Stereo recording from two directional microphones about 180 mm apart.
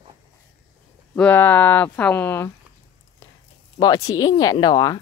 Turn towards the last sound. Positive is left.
turn(degrees=20)  # may be behind; listen again after turning